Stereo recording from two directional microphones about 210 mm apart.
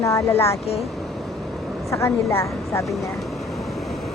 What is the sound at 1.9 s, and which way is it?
Speech, 15° left (ahead or behind).